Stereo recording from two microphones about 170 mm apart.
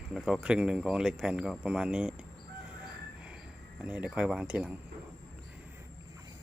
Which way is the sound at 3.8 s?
5° right (ahead or behind).